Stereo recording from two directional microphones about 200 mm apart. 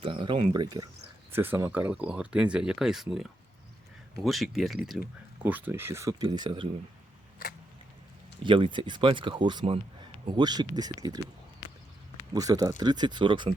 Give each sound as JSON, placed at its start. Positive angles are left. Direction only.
{"t": 0.0, "sound": "speech", "side_deg": -25}
{"t": 8.4, "sound": "speech", "side_deg": -25}
{"t": 12.3, "sound": "speech", "side_deg": -20}